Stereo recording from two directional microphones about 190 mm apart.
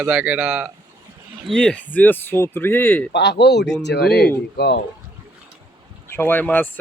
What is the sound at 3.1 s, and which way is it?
Speech, 60° left (ahead or behind).